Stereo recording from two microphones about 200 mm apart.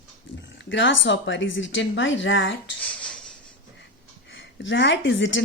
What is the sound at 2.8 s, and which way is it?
Dishes, 5° left (ahead or behind).